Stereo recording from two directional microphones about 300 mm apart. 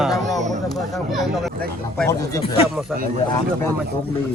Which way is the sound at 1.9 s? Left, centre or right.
Centre.